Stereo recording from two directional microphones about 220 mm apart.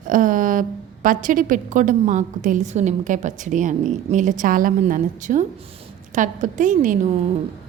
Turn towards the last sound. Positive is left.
turn(degrees=-35)  # may be behind; listen again after turning